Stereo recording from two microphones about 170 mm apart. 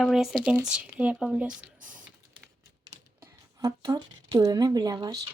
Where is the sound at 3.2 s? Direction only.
20° right (ahead or behind).